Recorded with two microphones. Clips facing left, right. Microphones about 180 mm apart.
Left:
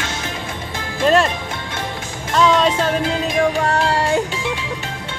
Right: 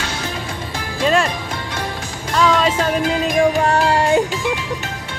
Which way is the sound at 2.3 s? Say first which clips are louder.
Left 1 dB; centre (ahead or behind).